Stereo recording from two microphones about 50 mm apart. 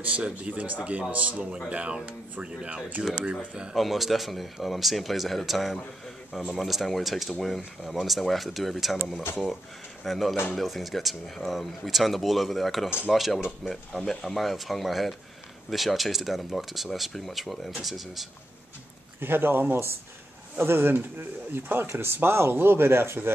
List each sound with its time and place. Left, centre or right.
0.0 s speech: right
1.3 s speech: centre
3.7 s speech: centre
10.0 s speech: centre
19.1 s speech: right